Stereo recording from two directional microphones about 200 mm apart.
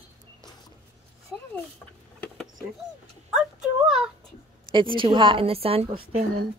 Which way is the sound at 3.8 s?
Centre (ahead or behind).